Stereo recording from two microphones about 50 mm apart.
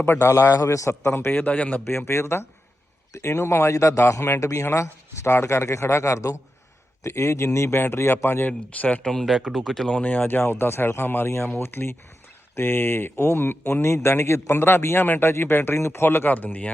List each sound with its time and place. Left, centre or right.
0.0 s a man's voice: left
1.3 s speech: left
1.5 s speech: left
2.0 s a man's voice: left
3.1 s speech: left
4.4 s speech: left
4.7 s speech: left
7.0 s a man's voice: left
8.4 s speech: left
9.0 s speech: centre
9.2 s speech: centre
9.9 s a man's voice: left
14.9 s speech: left